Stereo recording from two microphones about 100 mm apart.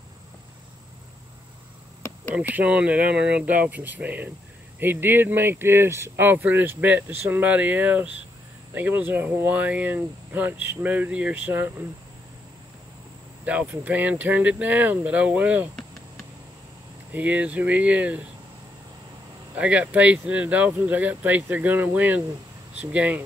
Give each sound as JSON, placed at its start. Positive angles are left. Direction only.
{"t": 2.3, "sound": "speech", "side_deg": -15}
{"t": 13.5, "sound": "speech", "side_deg": -15}
{"t": 17.1, "sound": "speech", "side_deg": -15}
{"t": 19.5, "sound": "speech", "side_deg": -10}